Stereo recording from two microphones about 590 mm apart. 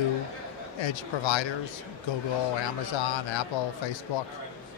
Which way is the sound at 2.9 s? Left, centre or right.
Left.